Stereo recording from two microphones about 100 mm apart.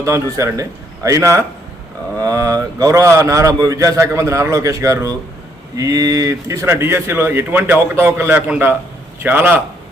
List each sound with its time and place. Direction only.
0.0 s a man's voice: 30° right (ahead or behind)